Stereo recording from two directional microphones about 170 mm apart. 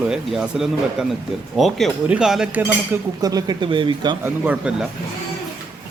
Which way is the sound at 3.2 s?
20° right (ahead or behind).